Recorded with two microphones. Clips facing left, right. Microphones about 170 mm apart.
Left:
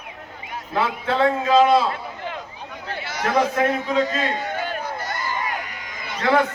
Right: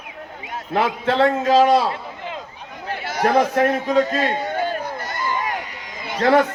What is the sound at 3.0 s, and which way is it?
A man's voice, 50° right (ahead or behind).